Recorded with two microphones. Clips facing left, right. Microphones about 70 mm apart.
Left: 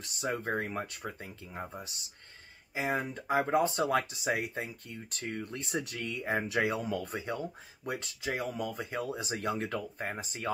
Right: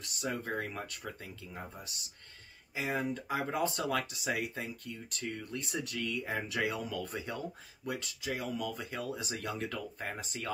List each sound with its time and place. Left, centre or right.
0.0 s speech: left